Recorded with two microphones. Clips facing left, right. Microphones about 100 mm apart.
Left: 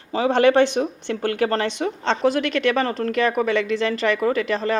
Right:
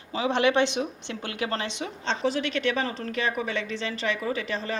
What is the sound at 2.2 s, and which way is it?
Speech, 75° left (ahead or behind).